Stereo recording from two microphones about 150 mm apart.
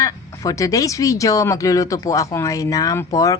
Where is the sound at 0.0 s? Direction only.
20° left (ahead or behind).